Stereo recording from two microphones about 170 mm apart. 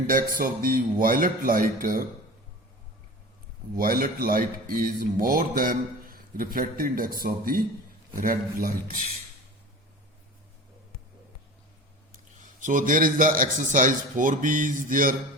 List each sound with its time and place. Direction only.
0.1 s a man's voice: 55° right (ahead or behind)
3.8 s a man's voice: 55° right (ahead or behind)
12.1 s a man's voice: 50° right (ahead or behind)